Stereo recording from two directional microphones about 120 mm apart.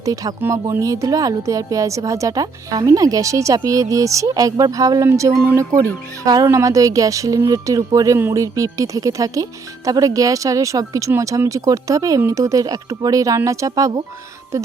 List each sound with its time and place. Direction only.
0.0 s speech: 30° right (ahead or behind)